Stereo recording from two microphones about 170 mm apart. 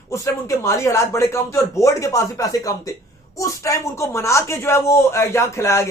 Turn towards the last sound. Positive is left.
turn(degrees=15)  # may be behind; listen again after turning